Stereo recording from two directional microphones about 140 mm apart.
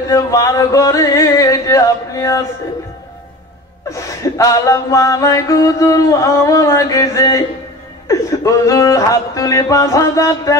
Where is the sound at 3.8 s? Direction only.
25° left (ahead or behind).